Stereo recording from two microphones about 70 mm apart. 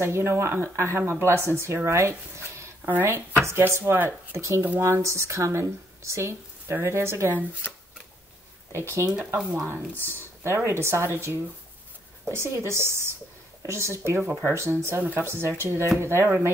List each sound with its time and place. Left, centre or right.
0.0 s speech: right
2.8 s speech: right
4.4 s speech: right
8.7 s speech: right
9.1 s speech: right
9.4 s speech: centre
10.4 s speech: right